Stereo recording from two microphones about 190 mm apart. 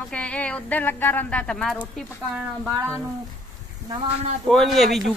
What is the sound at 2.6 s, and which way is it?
Speech, 15° right (ahead or behind).